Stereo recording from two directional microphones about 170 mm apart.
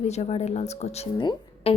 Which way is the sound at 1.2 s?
30° left (ahead or behind).